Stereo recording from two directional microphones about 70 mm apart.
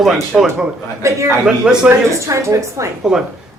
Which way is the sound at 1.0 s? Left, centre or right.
Right.